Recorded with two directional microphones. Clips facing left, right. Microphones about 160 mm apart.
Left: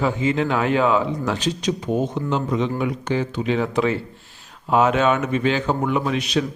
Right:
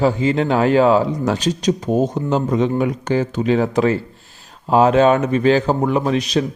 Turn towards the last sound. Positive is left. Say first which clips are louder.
# right 4 dB
turn(degrees=-35)  # may be behind; listen again after turning